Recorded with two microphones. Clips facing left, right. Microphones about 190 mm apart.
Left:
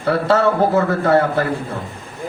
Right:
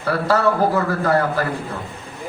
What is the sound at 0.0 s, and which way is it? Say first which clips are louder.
A man's voice: left 3 dB; 25° left (ahead or behind).